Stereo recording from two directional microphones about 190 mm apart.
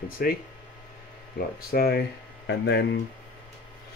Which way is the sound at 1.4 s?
55° left (ahead or behind).